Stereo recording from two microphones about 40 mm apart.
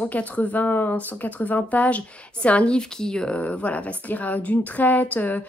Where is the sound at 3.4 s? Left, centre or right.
Left.